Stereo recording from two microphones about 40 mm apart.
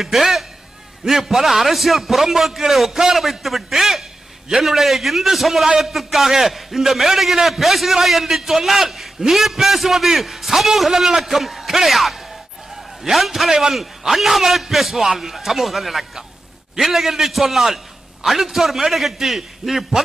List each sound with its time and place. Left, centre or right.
0.0 s a man's voice: centre